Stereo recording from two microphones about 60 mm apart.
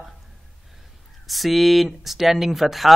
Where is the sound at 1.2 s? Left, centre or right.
Centre.